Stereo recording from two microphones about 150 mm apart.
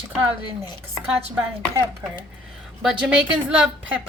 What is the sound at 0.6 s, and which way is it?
Speech, 25° left (ahead or behind).